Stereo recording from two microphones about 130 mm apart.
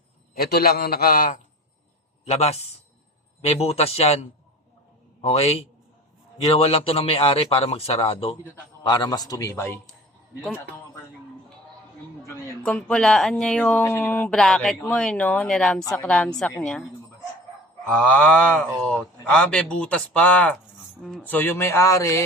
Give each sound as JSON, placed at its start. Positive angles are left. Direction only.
{"t": 1.1, "sound": "a man's voice", "side_deg": 90}
{"t": 2.2, "sound": "a man's voice", "side_deg": 55}
{"t": 8.8, "sound": "a man's voice", "side_deg": 35}
{"t": 12.6, "sound": "speech", "side_deg": 5}
{"t": 17.8, "sound": "speech", "side_deg": 10}